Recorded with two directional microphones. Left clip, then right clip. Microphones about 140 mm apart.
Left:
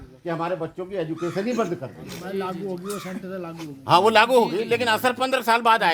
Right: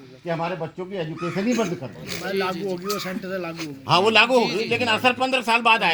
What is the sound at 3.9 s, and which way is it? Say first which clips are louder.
A man's voice: left 1 dB; 50° left (ahead or behind).